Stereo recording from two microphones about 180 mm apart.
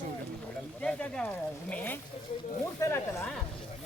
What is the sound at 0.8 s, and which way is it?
Speech, 5° left (ahead or behind).